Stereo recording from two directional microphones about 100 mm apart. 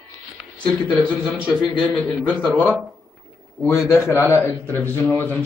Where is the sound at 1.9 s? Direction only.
5° left (ahead or behind).